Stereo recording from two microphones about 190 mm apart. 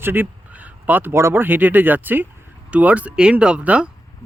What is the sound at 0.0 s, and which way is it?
Speech, 10° right (ahead or behind).